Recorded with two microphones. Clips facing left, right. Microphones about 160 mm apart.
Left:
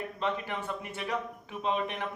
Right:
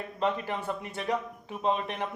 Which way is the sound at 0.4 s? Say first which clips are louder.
Right 3 dB; 35° right (ahead or behind).